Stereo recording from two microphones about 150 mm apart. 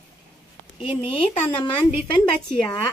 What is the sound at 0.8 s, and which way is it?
Speech, 40° left (ahead or behind).